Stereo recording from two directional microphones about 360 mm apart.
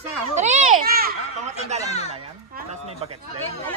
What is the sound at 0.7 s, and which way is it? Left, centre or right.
Children playing, right.